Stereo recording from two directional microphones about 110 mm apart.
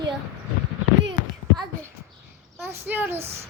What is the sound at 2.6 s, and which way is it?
Speech, 20° right (ahead or behind).